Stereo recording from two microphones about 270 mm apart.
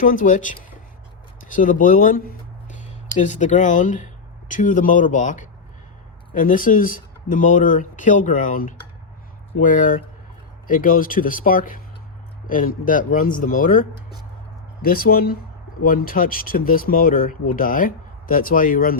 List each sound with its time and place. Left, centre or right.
0.0 s speech: left